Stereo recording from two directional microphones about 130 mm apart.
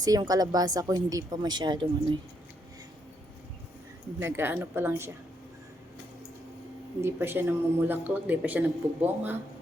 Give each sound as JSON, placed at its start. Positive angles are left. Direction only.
{"t": 0.0, "sound": "a woman's voice", "side_deg": -30}
{"t": 4.2, "sound": "speech", "side_deg": -20}
{"t": 7.0, "sound": "speech", "side_deg": -20}